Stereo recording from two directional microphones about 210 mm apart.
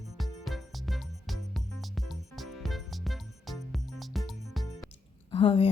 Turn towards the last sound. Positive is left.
turn(degrees=25)  # may be behind; listen again after turning